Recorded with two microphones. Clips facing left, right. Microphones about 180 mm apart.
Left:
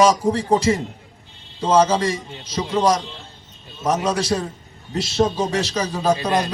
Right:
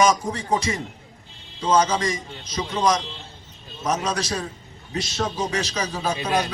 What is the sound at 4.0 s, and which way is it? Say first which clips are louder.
Speech: left 5 dB; centre (ahead or behind).